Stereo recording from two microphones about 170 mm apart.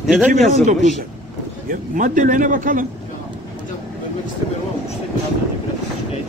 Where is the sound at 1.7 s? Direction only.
50° right (ahead or behind).